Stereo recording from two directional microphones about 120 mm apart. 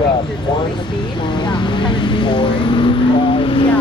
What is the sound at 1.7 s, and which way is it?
Vehicle, 40° left (ahead or behind).